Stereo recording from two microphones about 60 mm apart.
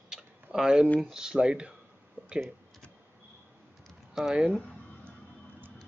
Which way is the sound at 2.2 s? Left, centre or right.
Right.